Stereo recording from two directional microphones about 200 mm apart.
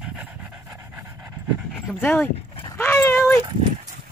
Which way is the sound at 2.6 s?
10° left (ahead or behind).